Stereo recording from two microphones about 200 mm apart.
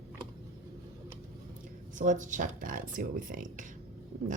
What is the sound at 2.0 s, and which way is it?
Speech, 40° right (ahead or behind).